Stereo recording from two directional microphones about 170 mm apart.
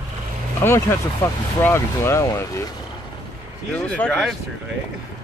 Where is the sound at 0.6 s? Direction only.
15° left (ahead or behind).